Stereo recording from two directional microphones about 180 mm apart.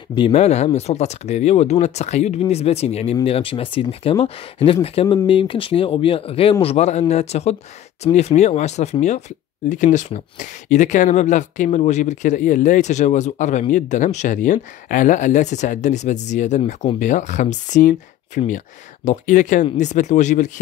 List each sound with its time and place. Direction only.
0.1 s speech: 30° left (ahead or behind)